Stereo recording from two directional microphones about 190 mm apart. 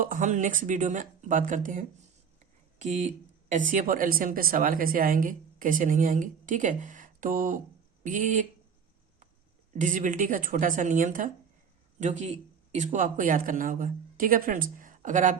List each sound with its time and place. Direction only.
0.0 s speech: 45° right (ahead or behind)
9.7 s speech: 40° right (ahead or behind)